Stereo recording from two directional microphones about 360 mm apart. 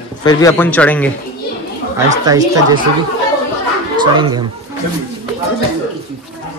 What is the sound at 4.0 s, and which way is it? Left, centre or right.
Speech, centre.